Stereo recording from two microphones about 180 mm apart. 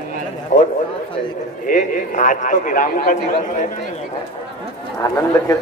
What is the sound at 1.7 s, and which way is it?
A man's voice, 45° left (ahead or behind).